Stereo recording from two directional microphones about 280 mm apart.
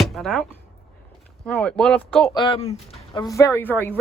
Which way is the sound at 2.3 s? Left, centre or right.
Centre.